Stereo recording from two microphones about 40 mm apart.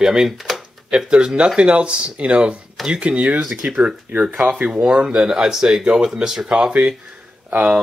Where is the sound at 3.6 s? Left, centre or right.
Right.